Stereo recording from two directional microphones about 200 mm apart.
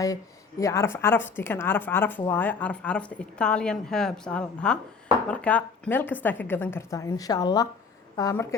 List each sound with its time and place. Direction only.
0.6 s speech: 15° left (ahead or behind)